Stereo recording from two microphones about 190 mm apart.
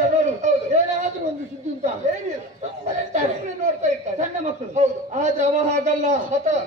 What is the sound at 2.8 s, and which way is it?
Speech, 40° right (ahead or behind).